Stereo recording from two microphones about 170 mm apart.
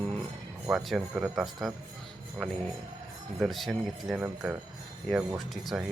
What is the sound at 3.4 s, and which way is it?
Speech, centre (ahead or behind).